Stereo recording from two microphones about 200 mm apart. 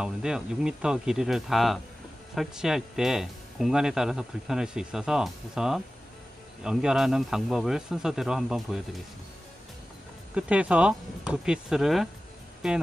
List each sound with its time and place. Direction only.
0.0 s speech: 5° right (ahead or behind)
10.3 s speech: 5° right (ahead or behind)